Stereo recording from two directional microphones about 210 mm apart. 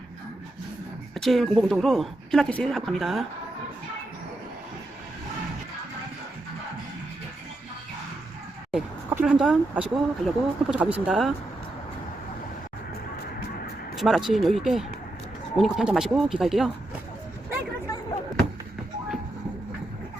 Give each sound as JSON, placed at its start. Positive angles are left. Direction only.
{"t": 1.1, "sound": "speech", "side_deg": 0}
{"t": 8.7, "sound": "speech", "side_deg": -5}
{"t": 13.9, "sound": "speech", "side_deg": 0}